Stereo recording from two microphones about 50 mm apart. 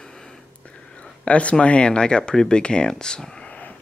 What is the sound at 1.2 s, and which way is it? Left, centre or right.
Speech, left.